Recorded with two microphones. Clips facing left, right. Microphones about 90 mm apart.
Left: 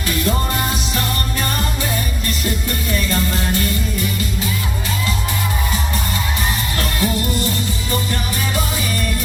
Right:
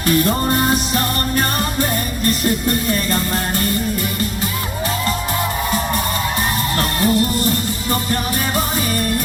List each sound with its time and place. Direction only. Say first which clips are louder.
0.1 s music: right 4 dB; 45° right (ahead or behind)
6.7 s music: right 5 dB; 50° right (ahead or behind)